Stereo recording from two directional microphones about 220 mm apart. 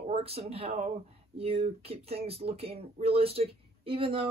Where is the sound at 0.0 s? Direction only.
25° right (ahead or behind).